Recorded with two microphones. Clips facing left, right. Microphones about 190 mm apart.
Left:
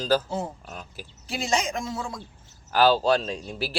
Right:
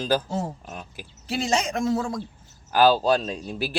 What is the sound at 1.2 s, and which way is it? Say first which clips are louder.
Speech: right 2 dB; 40° right (ahead or behind).